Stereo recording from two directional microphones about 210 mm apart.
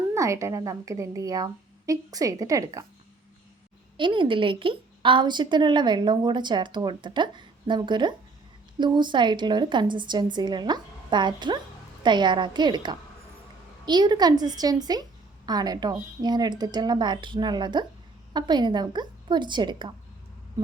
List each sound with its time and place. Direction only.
0.1 s a woman's voice: 15° right (ahead or behind)
3.9 s a woman's voice: 25° right (ahead or behind)